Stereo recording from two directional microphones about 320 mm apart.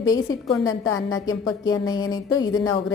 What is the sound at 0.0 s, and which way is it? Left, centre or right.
A woman's voice, centre.